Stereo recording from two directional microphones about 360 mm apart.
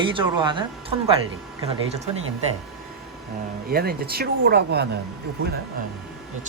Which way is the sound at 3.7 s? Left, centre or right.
Right.